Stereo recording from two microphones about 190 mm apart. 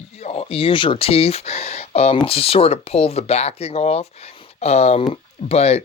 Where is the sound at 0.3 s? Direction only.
30° left (ahead or behind).